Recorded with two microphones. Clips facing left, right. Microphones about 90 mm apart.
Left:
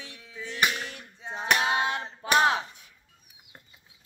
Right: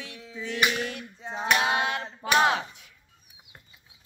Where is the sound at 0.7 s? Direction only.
20° left (ahead or behind).